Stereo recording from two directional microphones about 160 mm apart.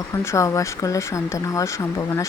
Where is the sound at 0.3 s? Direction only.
20° left (ahead or behind).